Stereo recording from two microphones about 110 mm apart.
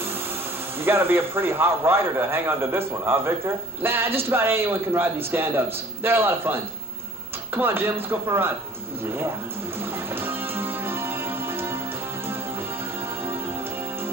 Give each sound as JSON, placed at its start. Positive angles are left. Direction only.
{"t": 0.7, "sound": "a man's voice", "side_deg": -20}
{"t": 9.8, "sound": "music", "side_deg": -20}